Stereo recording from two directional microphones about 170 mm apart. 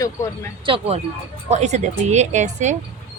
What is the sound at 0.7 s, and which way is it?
Speech, 35° right (ahead or behind).